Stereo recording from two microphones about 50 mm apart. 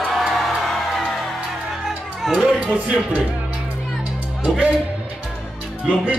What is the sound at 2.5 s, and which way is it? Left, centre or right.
Speech, right.